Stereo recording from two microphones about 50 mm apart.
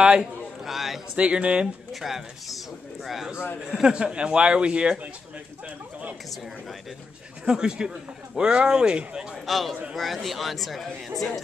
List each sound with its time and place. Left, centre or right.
0.0 s speech: centre
0.7 s a man's voice: centre
1.1 s speech: right
1.9 s speech: centre; by 5.1 s right
7.4 s speech: centre
9.3 s speech: centre